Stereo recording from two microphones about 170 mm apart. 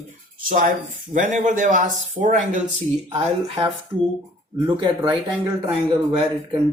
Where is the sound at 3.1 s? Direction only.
30° right (ahead or behind).